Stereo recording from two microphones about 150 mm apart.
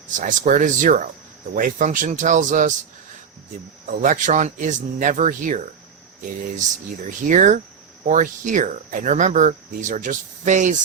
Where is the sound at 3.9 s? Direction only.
60° right (ahead or behind).